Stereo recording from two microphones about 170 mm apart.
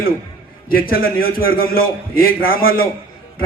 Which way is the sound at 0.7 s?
60° left (ahead or behind).